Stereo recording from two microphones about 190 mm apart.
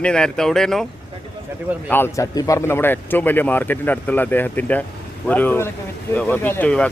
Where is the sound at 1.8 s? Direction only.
10° left (ahead or behind).